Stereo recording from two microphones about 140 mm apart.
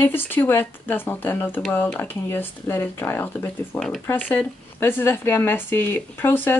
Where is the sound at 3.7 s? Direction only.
5° left (ahead or behind).